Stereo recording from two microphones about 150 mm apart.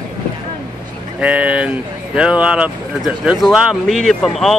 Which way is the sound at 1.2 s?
10° right (ahead or behind).